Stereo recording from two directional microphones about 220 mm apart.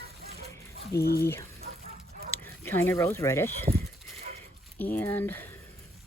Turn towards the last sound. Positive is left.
turn(degrees=10)  # may be behind; listen again after turning